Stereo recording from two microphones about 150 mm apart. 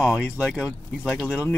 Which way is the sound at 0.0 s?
5° right (ahead or behind).